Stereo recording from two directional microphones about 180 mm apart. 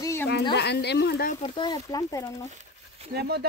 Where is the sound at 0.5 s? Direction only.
65° left (ahead or behind).